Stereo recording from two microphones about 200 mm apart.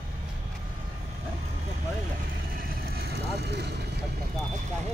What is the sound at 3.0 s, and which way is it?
Speech, 55° right (ahead or behind).